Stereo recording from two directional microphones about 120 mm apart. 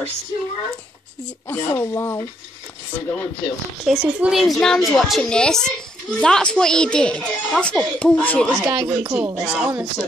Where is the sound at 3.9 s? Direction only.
5° right (ahead or behind).